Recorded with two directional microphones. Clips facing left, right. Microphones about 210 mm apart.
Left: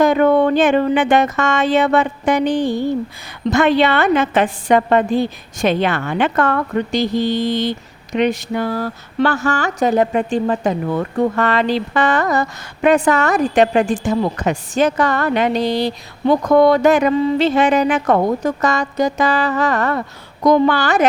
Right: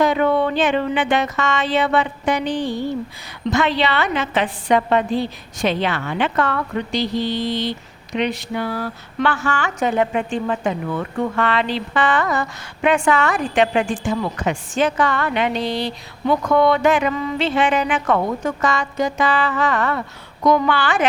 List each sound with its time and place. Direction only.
0.0 s a woman's voice: 45° left (ahead or behind)